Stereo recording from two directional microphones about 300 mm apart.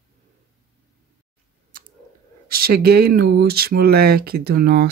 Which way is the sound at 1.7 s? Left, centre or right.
Right.